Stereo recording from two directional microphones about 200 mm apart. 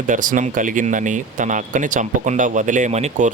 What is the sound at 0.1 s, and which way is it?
Speech, 40° right (ahead or behind).